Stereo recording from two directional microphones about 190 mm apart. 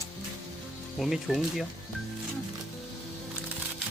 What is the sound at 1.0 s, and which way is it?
Speech, centre (ahead or behind).